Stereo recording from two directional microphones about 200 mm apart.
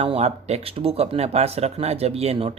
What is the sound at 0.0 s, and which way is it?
Speech, 30° right (ahead or behind).